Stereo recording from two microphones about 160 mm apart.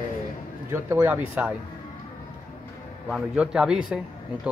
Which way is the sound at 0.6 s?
15° right (ahead or behind).